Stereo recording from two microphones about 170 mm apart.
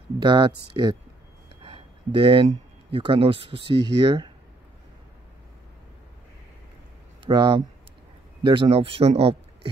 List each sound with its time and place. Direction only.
0.2 s speech: 25° right (ahead or behind)
1.6 s a sound: 35° right (ahead or behind)
2.9 s speech: 30° right (ahead or behind)
7.2 s speech: 25° right (ahead or behind)